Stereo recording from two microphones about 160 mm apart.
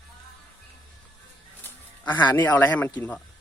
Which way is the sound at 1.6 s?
10° left (ahead or behind).